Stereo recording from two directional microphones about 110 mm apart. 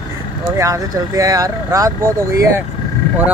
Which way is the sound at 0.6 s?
30° right (ahead or behind).